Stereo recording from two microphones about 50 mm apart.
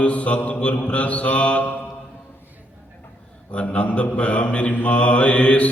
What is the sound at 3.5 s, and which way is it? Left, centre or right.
Mantra, left.